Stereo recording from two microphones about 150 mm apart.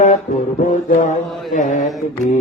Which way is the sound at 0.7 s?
60° left (ahead or behind).